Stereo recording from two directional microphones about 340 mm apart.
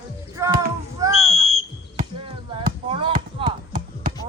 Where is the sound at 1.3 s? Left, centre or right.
Centre.